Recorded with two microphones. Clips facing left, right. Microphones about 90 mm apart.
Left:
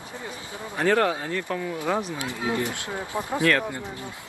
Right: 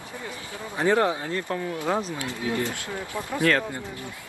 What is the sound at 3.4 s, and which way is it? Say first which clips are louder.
Speech: even; 20° right (ahead or behind).